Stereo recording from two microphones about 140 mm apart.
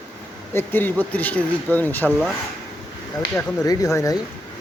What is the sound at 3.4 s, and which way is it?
Speech, 25° left (ahead or behind).